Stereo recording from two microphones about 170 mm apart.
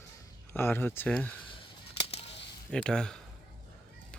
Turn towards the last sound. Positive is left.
turn(degrees=5)  # may be behind; listen again after turning